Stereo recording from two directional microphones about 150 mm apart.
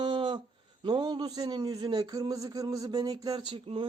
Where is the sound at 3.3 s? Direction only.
35° right (ahead or behind).